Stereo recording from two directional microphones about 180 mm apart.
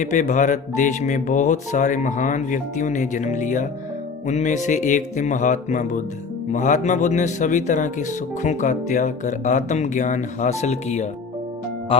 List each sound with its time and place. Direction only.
0.0 s speech: 40° left (ahead or behind)